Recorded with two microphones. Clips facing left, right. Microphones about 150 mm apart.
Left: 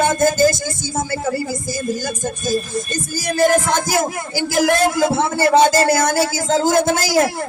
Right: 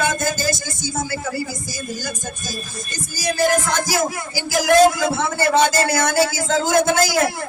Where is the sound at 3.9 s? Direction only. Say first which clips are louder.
Left 2 dB; 50° left (ahead or behind).